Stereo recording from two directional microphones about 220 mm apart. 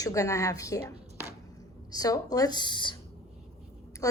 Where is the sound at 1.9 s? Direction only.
15° left (ahead or behind).